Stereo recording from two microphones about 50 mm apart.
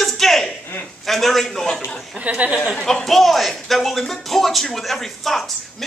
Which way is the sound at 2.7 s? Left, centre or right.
Centre.